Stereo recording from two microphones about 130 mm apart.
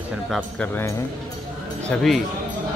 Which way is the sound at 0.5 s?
15° left (ahead or behind).